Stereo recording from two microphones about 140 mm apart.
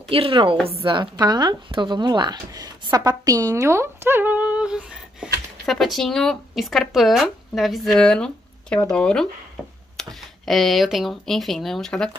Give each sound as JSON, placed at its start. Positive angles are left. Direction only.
{"t": 0.1, "sound": "a woman's voice", "side_deg": -40}